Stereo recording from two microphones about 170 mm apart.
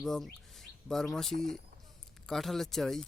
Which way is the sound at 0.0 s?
Centre (ahead or behind).